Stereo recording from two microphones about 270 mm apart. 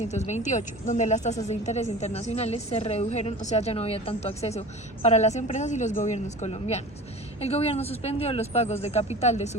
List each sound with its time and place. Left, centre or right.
0.1 s a woman's voice: left